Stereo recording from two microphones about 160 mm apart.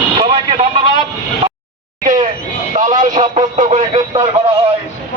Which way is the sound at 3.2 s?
45° right (ahead or behind).